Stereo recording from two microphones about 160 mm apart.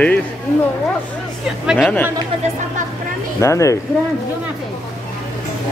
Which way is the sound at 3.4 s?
20° left (ahead or behind).